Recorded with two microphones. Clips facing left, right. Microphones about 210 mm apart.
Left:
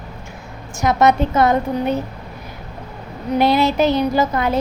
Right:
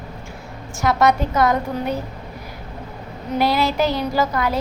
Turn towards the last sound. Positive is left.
turn(degrees=20)  # may be behind; listen again after turning